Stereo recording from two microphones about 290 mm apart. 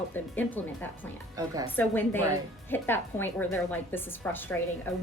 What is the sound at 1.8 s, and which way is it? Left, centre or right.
A woman's voice, centre.